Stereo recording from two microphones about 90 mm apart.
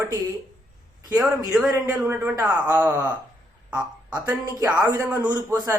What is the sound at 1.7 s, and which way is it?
A man's voice, 25° right (ahead or behind).